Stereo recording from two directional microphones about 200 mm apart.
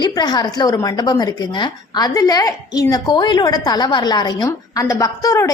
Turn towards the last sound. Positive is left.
turn(degrees=15)  # may be behind; listen again after turning